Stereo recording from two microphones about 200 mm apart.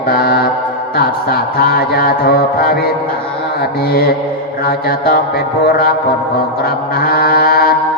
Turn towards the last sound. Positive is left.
turn(degrees=50)  # may be behind; listen again after turning